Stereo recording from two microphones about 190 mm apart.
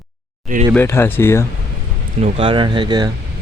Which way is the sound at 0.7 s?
10° left (ahead or behind).